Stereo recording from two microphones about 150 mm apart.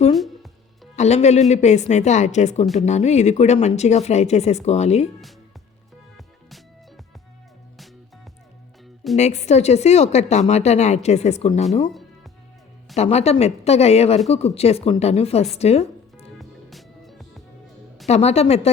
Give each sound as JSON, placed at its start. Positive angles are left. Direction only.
{"t": 0.9, "sound": "speech", "side_deg": 50}
{"t": 6.1, "sound": "music", "side_deg": 0}
{"t": 9.1, "sound": "speech", "side_deg": 50}
{"t": 13.0, "sound": "speech", "side_deg": 45}
{"t": 15.5, "sound": "music", "side_deg": 45}
{"t": 16.4, "sound": "music", "side_deg": 0}
{"t": 18.1, "sound": "speech", "side_deg": 45}